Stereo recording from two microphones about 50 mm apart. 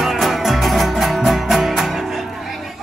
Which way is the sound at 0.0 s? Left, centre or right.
Centre.